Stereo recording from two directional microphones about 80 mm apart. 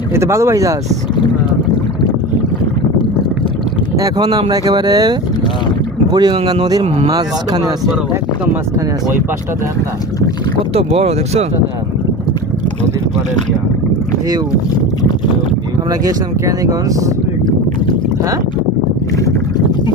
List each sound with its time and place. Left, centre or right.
0.1 s speech: right
3.9 s speech: right
15.9 s speech: right